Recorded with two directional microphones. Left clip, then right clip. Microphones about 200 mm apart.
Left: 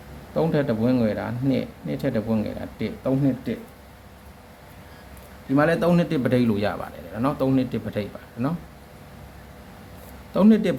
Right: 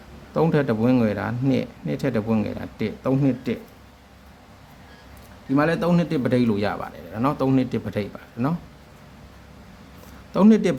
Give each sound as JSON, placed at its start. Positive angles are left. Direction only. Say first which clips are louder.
{"t": 0.3, "sound": "speech", "louder": "right 2 dB", "side_deg": -25}
{"t": 5.5, "sound": "a man's voice", "louder": "left 1 dB", "side_deg": -5}
{"t": 10.3, "sound": "a man's voice", "louder": "right 1 dB", "side_deg": -20}